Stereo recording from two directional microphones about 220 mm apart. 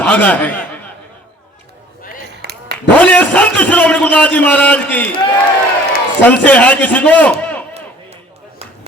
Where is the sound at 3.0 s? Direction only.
5° left (ahead or behind).